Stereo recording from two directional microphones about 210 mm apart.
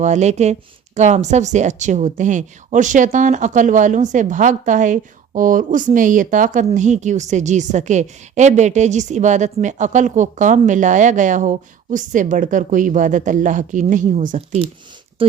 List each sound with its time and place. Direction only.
0.0 s a woman's voice: 35° right (ahead or behind)